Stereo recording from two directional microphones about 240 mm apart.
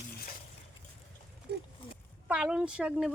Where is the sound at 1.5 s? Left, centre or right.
Right.